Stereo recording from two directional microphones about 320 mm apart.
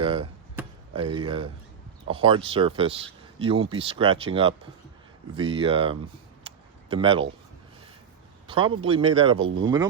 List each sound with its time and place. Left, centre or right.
0.0 s chop: centre
1.1 s speech: centre
6.4 s a sound: centre
8.4 s speech: centre